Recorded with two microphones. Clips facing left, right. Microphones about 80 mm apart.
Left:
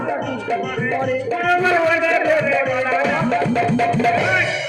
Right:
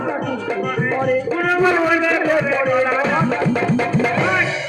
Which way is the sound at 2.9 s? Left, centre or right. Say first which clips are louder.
Even; centre.